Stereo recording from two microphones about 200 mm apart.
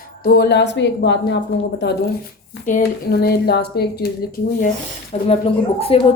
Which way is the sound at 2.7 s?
45° left (ahead or behind).